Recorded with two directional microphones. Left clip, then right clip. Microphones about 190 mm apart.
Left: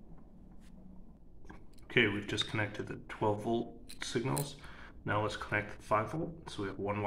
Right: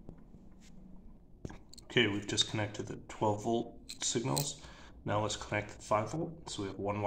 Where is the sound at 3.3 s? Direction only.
15° right (ahead or behind).